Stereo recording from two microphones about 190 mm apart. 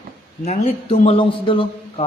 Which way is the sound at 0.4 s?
35° left (ahead or behind).